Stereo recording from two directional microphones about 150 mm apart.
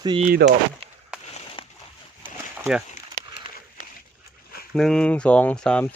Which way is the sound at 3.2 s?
70° right (ahead or behind).